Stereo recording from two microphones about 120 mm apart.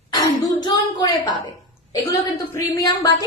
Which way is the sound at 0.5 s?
35° left (ahead or behind).